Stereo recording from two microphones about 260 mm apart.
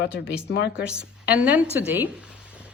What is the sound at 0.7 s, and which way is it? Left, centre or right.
Speech, centre.